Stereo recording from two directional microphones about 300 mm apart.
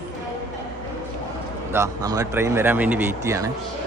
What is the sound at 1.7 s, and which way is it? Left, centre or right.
A man's voice, centre.